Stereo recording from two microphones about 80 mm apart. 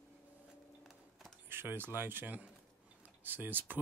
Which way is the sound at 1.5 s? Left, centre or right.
Right.